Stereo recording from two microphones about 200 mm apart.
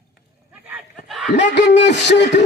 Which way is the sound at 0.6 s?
5° right (ahead or behind).